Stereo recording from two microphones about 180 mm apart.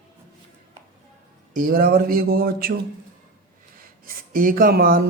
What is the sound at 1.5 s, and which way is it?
Speech, 55° right (ahead or behind).